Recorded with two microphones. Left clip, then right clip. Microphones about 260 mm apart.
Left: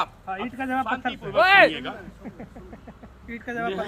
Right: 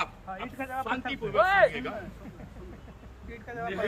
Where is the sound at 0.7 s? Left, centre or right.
Left.